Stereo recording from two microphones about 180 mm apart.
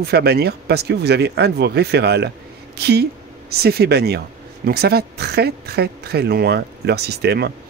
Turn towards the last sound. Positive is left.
turn(degrees=-65)  # may be behind; listen again after turning